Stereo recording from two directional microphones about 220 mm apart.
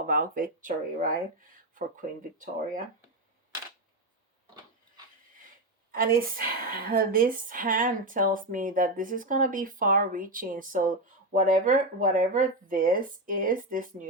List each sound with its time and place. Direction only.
0.0 s a woman's voice: 40° right (ahead or behind)
5.9 s a woman's voice: 40° right (ahead or behind)